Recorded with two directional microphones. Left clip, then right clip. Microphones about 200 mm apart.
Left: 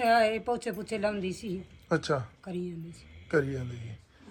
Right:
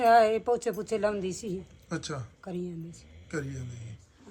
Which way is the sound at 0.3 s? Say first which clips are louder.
Right 4 dB; 20° right (ahead or behind).